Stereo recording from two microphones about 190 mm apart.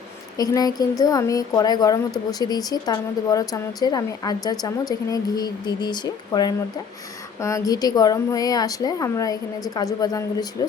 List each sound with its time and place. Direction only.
0.3 s a woman's voice: 20° left (ahead or behind)